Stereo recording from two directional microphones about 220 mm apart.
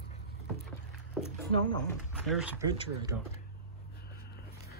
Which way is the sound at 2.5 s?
15° right (ahead or behind).